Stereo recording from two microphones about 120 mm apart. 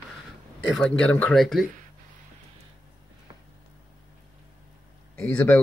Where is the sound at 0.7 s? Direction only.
5° left (ahead or behind).